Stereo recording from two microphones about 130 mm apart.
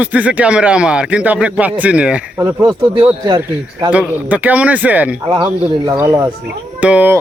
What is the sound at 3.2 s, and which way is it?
Speech, 35° right (ahead or behind).